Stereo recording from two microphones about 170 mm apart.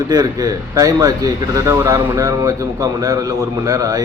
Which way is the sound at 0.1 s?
20° right (ahead or behind).